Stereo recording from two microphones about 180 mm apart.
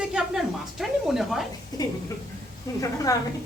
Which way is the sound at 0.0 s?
5° right (ahead or behind).